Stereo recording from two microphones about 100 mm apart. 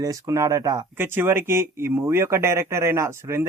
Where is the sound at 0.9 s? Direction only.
20° right (ahead or behind).